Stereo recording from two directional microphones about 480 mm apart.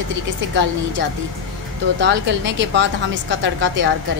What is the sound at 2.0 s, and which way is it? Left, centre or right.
A woman's voice, right.